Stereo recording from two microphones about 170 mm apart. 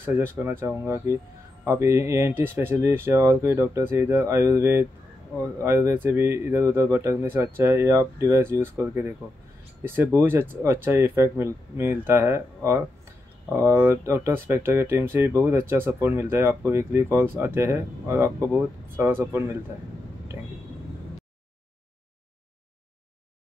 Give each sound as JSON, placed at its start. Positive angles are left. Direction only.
{"t": 0.0, "sound": "speech", "side_deg": -10}